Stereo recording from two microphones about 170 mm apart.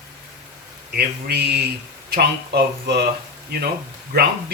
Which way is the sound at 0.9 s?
70° right (ahead or behind).